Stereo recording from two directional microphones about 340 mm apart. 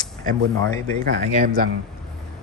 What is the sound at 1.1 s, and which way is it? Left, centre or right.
Speech, right.